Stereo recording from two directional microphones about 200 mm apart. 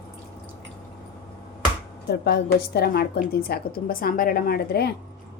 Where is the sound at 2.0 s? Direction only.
55° left (ahead or behind).